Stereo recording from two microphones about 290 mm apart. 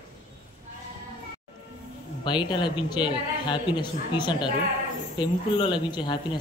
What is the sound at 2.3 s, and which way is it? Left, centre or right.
Speech, centre.